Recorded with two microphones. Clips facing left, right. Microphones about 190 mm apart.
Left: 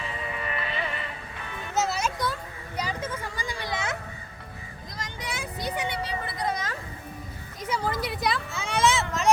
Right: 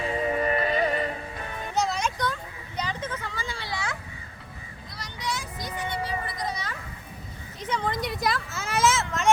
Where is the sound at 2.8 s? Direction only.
10° left (ahead or behind).